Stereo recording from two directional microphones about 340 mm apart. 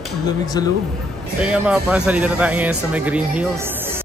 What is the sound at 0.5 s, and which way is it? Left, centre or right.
Speech, centre.